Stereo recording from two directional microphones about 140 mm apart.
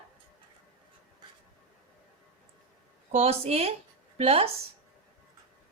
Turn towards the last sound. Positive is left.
turn(degrees=-45)  # may be behind; listen again after turning